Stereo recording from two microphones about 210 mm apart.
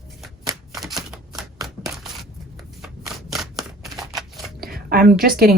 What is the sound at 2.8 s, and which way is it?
Shuffling cards, centre (ahead or behind).